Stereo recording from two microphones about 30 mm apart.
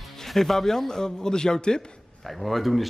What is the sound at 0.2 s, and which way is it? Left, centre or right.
A man's voice, centre.